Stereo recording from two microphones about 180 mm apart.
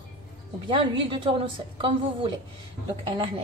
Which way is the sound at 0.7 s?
30° right (ahead or behind).